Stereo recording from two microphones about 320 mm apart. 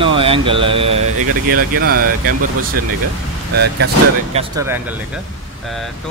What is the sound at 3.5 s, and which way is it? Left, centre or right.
Speech, right.